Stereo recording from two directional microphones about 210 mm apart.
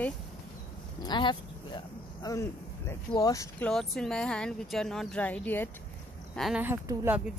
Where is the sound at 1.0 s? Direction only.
20° left (ahead or behind); by 6.6 s centre (ahead or behind).